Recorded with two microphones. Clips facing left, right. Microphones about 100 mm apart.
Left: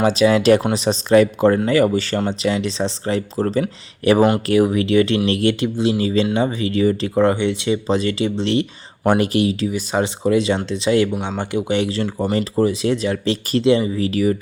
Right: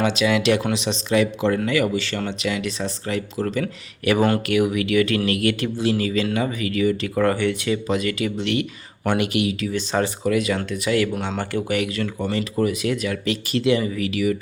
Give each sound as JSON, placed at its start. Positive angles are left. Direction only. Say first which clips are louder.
{"t": 0.0, "sound": "speech", "louder": "left 5 dB", "side_deg": 35}
{"t": 9.7, "sound": "speech", "louder": "left 2 dB", "side_deg": 10}
{"t": 10.2, "sound": "speech", "louder": "left 4 dB", "side_deg": 25}